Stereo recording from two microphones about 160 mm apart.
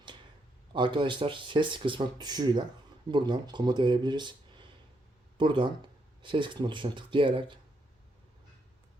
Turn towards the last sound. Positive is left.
turn(degrees=-30)  # may be behind; listen again after turning